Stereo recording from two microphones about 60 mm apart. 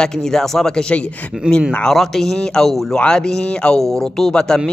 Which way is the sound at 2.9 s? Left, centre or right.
Centre.